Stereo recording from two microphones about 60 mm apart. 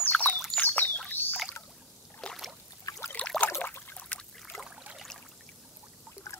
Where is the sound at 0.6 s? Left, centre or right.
Left.